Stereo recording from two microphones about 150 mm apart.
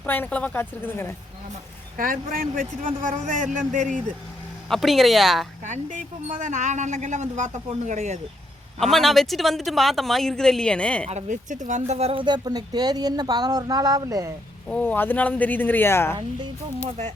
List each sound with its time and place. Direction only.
0.0 s speech: 10° left (ahead or behind)
2.0 s a man's voice: 65° right (ahead or behind)
4.7 s a woman's voice: centre (ahead or behind)
5.6 s a woman's voice: 55° right (ahead or behind)
8.8 s a woman's voice: centre (ahead or behind)
11.0 s speech: 50° right (ahead or behind); by 14.3 s 25° right (ahead or behind)
14.7 s speech: 10° left (ahead or behind)